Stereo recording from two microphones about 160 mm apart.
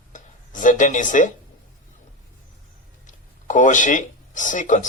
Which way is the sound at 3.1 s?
50° left (ahead or behind).